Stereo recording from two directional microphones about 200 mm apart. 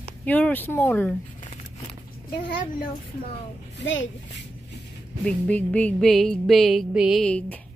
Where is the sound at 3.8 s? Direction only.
65° left (ahead or behind).